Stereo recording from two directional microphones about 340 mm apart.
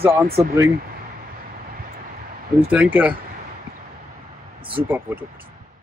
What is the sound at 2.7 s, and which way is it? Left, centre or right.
Speech, centre.